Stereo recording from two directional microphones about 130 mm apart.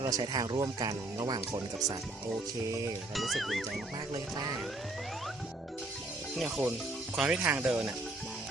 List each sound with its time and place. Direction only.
0.0 s speech: 25° right (ahead or behind)
2.6 s speech: 25° right (ahead or behind)
3.2 s speech: centre (ahead or behind)
6.3 s speech: 5° right (ahead or behind)